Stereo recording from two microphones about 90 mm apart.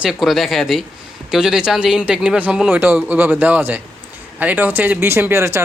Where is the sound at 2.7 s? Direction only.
20° right (ahead or behind).